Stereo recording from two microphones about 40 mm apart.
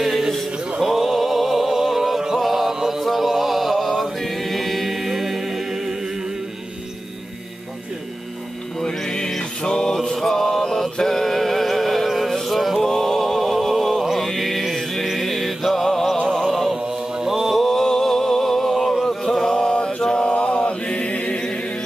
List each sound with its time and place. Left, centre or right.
0.7 s music: centre
8.8 s music: centre
12.8 s a sound: centre
14.0 s mantra: centre
15.0 s music: centre
16.7 s mantra: centre
17.6 s a sound: centre
19.5 s mantra: left
20.3 s mantra: left